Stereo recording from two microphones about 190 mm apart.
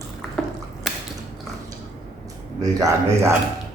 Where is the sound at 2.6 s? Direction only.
20° right (ahead or behind).